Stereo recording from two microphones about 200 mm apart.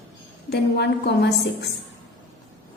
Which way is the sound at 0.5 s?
60° left (ahead or behind).